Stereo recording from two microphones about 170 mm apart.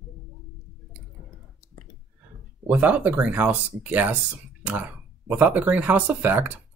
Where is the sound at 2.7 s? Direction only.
10° right (ahead or behind).